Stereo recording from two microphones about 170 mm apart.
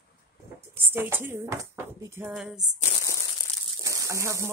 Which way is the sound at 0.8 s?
10° right (ahead or behind).